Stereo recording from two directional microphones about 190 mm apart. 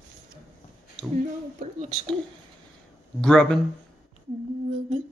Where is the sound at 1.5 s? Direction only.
35° right (ahead or behind).